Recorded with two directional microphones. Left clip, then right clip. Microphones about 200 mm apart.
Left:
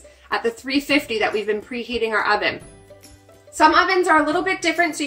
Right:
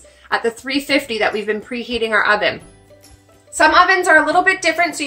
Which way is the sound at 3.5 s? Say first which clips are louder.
Right 4 dB; 15° right (ahead or behind).